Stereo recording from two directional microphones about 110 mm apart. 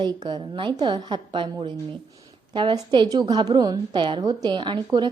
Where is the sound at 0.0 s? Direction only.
45° right (ahead or behind).